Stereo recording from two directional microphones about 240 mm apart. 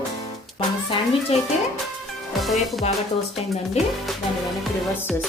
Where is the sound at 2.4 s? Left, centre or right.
Centre.